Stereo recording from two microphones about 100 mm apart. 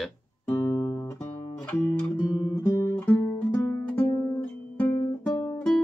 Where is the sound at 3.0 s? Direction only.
15° left (ahead or behind).